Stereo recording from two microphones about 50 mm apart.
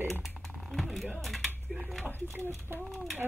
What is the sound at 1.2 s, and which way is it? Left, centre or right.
Speech, centre.